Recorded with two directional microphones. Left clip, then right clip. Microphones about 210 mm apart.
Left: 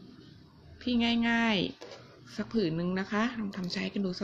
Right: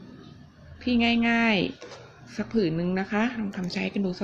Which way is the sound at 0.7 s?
10° left (ahead or behind).